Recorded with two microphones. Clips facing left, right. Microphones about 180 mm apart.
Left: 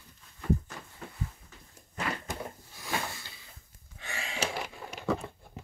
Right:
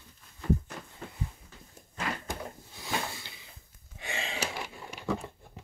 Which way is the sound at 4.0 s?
20° right (ahead or behind).